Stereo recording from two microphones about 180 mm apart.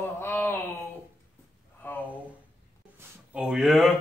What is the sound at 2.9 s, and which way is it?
Speech, 10° right (ahead or behind).